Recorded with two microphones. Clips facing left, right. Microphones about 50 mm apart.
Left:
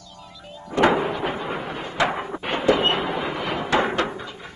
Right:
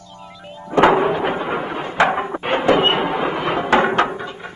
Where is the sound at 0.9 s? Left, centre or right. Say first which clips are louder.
Right 6 dB; right.